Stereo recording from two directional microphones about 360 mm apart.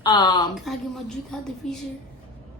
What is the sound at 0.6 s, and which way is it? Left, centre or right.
A woman's voice, centre.